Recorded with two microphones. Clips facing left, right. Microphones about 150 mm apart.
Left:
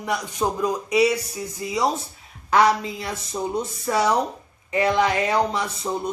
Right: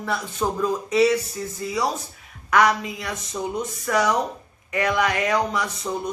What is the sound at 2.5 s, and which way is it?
Speech, 30° left (ahead or behind).